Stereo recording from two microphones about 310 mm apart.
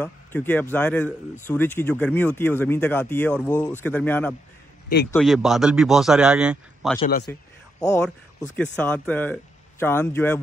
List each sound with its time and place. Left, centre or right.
0.0 s speech: centre
7.0 s a man's voice: left
7.8 s speech: centre